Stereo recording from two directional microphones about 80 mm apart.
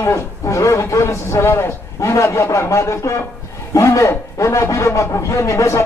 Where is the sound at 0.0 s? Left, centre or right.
Left.